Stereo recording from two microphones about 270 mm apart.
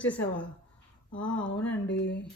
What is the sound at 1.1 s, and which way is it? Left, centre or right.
A woman's voice, left.